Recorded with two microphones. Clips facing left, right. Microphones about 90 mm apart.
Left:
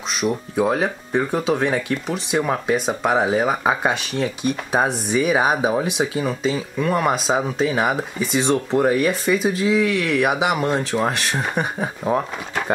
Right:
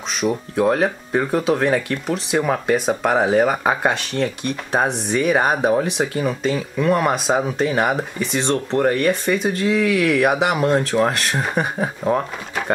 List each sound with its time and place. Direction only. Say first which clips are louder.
0.2 s speech: right 2 dB; centre (ahead or behind)